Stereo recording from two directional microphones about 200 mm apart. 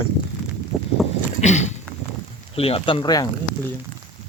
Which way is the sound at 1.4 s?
35° left (ahead or behind).